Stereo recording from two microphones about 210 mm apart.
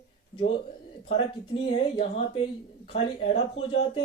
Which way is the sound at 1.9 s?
25° left (ahead or behind).